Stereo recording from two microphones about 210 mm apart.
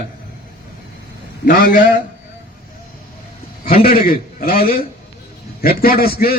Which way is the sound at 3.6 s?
45° left (ahead or behind).